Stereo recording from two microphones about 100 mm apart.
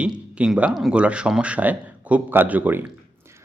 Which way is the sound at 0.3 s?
10° right (ahead or behind).